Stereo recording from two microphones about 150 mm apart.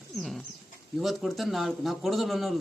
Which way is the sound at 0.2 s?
Centre (ahead or behind).